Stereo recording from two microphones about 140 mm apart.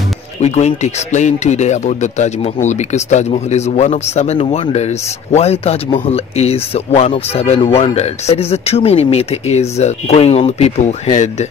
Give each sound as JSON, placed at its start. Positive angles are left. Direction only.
{"t": 0.4, "sound": "speech", "side_deg": 55}